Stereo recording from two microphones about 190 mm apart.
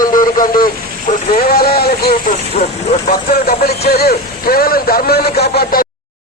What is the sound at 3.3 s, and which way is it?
Speech, 55° left (ahead or behind).